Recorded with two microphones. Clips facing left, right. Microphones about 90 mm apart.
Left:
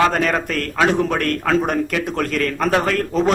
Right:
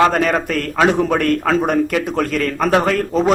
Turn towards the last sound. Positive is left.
turn(degrees=-5)  # may be behind; listen again after turning